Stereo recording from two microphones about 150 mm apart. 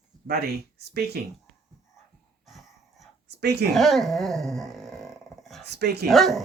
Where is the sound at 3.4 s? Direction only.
90° right.